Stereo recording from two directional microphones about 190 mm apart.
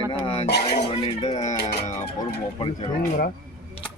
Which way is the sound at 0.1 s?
25° left (ahead or behind).